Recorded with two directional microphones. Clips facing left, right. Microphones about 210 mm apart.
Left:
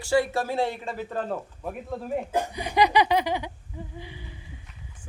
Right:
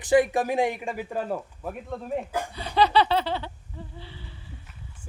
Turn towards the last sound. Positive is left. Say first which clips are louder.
# left 3 dB
turn(degrees=15)  # may be behind; listen again after turning